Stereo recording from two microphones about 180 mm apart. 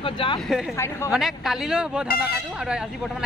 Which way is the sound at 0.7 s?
15° left (ahead or behind).